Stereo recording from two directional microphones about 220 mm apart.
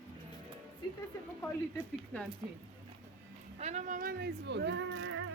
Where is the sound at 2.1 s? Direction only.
5° left (ahead or behind).